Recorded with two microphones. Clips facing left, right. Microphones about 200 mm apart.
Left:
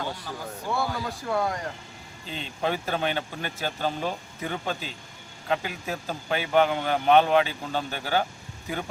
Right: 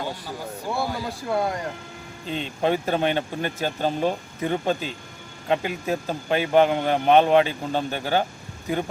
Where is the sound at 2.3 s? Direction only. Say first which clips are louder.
Right 5 dB; 45° right (ahead or behind).